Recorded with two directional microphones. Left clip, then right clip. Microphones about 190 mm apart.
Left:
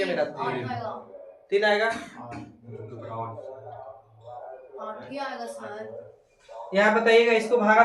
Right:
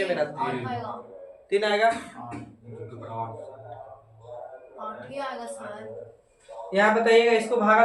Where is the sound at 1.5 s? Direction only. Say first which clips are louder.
Left 1 dB; 20° right (ahead or behind).